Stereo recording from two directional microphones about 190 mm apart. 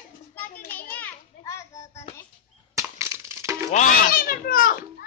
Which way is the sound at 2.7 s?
15° right (ahead or behind).